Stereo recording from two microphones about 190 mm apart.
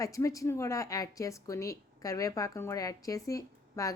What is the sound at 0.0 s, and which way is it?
A woman's voice, 15° left (ahead or behind).